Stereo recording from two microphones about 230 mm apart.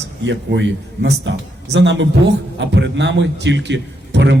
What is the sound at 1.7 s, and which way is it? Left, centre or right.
A man's voice, right.